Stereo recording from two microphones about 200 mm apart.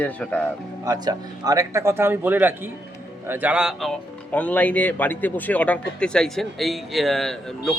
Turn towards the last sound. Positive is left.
turn(degrees=0)  # may be behind; listen again after turning